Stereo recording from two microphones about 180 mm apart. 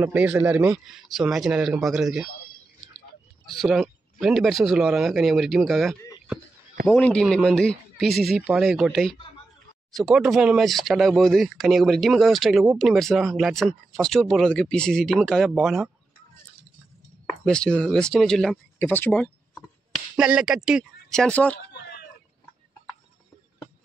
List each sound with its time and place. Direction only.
0.0 s speech: 10° right (ahead or behind)
3.6 s speech: centre (ahead or behind)
17.5 s speech: 5° left (ahead or behind)
20.2 s speech: 5° right (ahead or behind)
21.5 s a sound: 65° left (ahead or behind)